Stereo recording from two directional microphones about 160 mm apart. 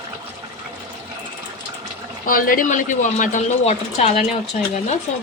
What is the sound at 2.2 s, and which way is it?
Speech, 60° left (ahead or behind).